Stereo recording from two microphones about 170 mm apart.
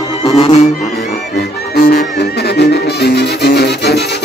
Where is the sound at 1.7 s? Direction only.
70° left (ahead or behind).